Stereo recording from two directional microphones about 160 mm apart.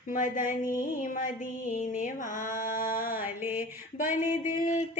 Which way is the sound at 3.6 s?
55° left (ahead or behind).